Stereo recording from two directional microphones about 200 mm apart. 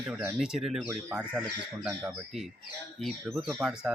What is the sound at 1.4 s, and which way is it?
Speech, 15° right (ahead or behind).